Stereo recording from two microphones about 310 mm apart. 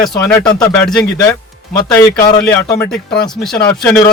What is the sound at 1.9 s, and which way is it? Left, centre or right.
A man's voice, centre.